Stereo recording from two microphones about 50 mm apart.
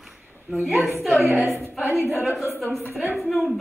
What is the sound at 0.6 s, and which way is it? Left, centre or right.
Speech, centre.